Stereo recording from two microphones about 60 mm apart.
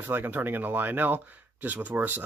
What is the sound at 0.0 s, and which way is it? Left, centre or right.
Speech, right.